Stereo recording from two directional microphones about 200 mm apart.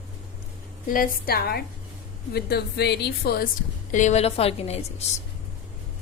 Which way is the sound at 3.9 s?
35° left (ahead or behind).